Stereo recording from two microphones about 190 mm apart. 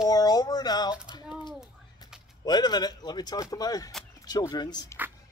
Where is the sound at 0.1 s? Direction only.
20° left (ahead or behind).